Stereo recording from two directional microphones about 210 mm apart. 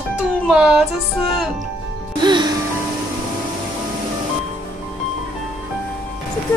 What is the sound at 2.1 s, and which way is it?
Music, 20° right (ahead or behind).